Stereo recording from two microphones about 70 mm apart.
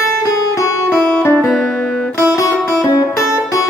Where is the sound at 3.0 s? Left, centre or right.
Left.